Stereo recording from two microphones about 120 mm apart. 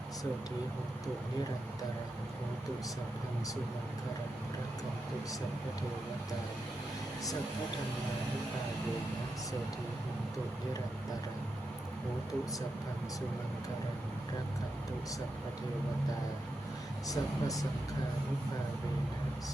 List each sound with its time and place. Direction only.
17.1 s speech: 30° left (ahead or behind)